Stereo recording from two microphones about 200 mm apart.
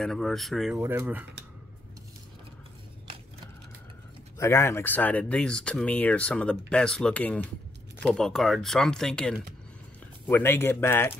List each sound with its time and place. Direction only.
0.0 s speech: centre (ahead or behind)
4.4 s speech: 15° left (ahead or behind)